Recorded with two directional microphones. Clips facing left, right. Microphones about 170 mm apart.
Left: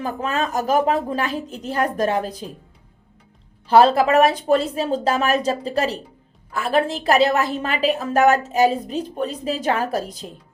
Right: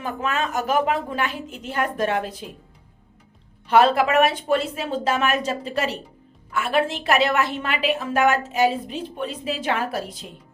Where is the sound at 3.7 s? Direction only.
35° left (ahead or behind).